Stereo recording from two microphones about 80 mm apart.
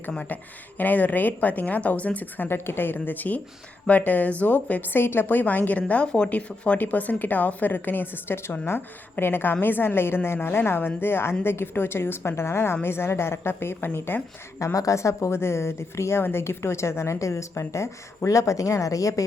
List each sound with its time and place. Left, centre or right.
0.1 s a woman's voice: centre
14.6 s speech: left